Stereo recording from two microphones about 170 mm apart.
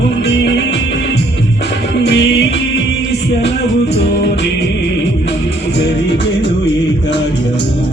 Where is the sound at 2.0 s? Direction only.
90° left.